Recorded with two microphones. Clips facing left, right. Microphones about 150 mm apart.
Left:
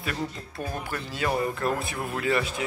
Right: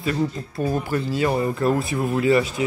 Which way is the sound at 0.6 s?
40° right (ahead or behind).